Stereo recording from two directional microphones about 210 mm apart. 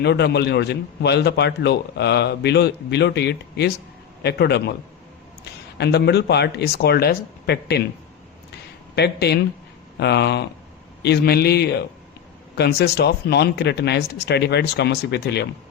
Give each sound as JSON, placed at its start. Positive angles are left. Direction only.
{"t": 0.0, "sound": "a man's voice", "side_deg": 50}
{"t": 5.7, "sound": "a man's voice", "side_deg": 55}
{"t": 9.0, "sound": "a man's voice", "side_deg": 50}